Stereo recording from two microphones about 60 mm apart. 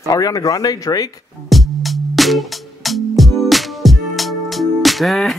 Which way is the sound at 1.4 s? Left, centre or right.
Centre.